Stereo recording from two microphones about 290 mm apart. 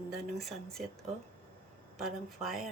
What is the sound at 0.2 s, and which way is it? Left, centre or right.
Speech, centre.